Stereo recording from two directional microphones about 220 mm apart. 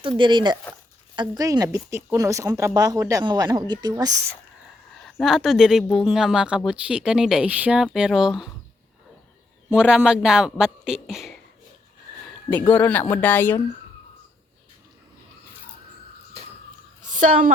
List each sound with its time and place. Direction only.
0.2 s a woman's voice: 20° right (ahead or behind)
5.0 s speech: centre (ahead or behind)
9.6 s speech: 5° right (ahead or behind)
12.7 s speech: 10° left (ahead or behind)
17.1 s a woman's voice: 35° right (ahead or behind)